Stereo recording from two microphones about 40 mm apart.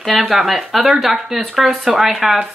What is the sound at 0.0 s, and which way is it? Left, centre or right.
Speech, centre.